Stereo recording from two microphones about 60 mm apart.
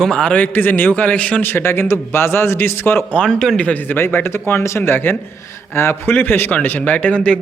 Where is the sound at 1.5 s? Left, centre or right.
Left.